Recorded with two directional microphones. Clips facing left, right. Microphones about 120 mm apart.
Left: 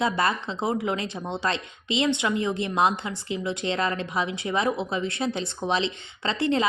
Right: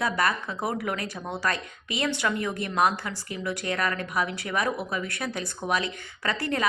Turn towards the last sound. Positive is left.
turn(degrees=25)  # may be behind; listen again after turning